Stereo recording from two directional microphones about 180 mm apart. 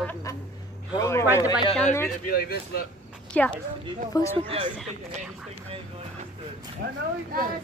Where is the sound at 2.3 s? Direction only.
60° left (ahead or behind).